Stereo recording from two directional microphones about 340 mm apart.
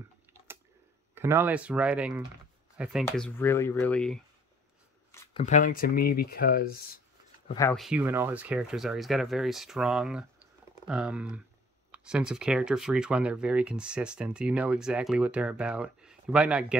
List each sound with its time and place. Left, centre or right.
1.1 s speech: centre
5.1 s shuffling cards: centre
5.4 s speech: left
7.4 s speech: centre